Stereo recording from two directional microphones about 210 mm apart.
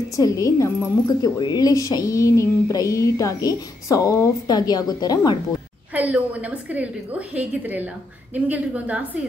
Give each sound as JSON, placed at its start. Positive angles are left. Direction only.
{"t": 0.1, "sound": "a woman's voice", "side_deg": 15}
{"t": 5.9, "sound": "a woman's voice", "side_deg": -5}